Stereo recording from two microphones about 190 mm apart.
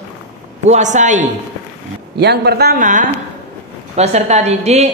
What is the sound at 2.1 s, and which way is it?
Speech, 60° right (ahead or behind).